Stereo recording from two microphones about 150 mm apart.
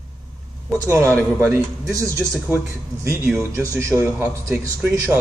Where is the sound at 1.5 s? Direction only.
20° right (ahead or behind).